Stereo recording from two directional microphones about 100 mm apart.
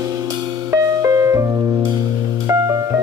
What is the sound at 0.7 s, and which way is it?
Music, 35° right (ahead or behind).